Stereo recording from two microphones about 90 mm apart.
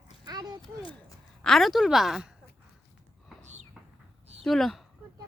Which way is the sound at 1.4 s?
Centre (ahead or behind).